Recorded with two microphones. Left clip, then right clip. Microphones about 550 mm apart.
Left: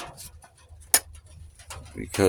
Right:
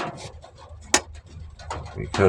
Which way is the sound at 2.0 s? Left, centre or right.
Left.